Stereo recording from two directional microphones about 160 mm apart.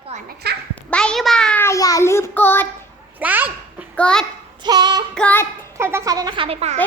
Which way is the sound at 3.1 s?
10° right (ahead or behind).